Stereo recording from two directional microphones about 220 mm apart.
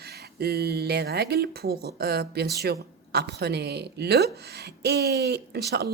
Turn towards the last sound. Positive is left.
turn(degrees=-50)  # may be behind; listen again after turning